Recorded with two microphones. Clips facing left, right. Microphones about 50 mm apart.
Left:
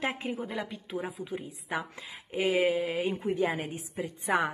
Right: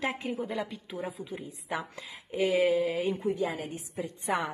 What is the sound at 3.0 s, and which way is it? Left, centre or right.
Speech, centre.